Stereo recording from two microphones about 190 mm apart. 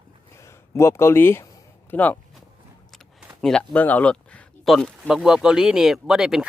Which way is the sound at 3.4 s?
5° left (ahead or behind).